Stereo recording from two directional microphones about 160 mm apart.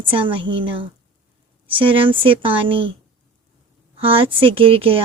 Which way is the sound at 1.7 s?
35° right (ahead or behind).